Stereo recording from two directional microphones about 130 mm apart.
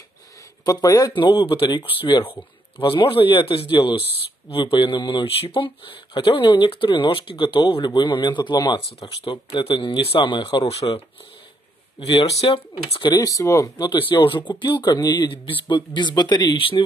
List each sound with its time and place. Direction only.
0.7 s speech: 25° left (ahead or behind)
12.0 s speech: 40° left (ahead or behind)